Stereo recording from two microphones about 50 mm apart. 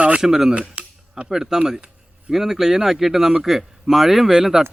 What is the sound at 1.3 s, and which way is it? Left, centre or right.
Speech, centre.